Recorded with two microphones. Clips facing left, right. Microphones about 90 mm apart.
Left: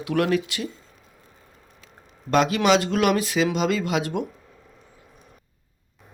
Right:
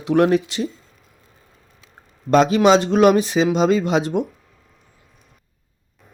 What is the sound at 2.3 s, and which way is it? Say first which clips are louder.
Speech: right 5 dB; 25° right (ahead or behind).